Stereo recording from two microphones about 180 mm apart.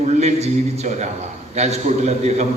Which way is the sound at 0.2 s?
40° right (ahead or behind).